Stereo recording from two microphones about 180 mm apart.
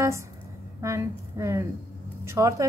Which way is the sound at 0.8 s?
15° right (ahead or behind).